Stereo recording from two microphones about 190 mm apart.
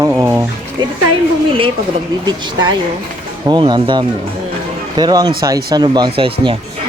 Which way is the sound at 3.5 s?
25° right (ahead or behind).